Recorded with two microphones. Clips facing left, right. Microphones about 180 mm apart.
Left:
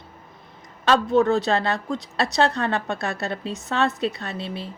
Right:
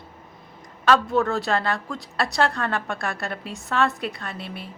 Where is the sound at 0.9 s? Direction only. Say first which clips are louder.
Left 2 dB; 20° left (ahead or behind).